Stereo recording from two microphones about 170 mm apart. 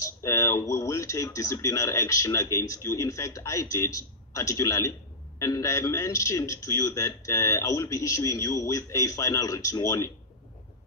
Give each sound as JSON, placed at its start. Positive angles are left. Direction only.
{"t": 0.0, "sound": "speech", "side_deg": 20}